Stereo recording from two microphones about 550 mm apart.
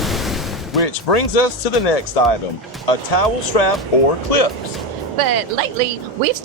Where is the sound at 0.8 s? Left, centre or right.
Left.